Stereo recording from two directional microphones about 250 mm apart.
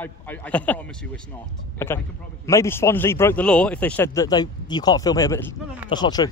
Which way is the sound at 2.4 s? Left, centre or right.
Centre.